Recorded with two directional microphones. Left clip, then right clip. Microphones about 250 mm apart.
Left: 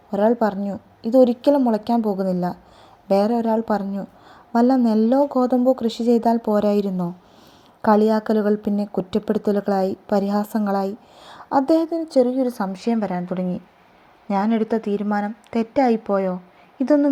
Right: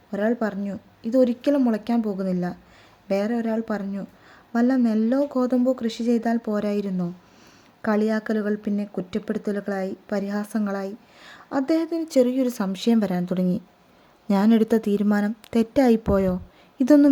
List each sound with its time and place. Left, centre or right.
0.1 s a woman's voice: centre; by 17.1 s right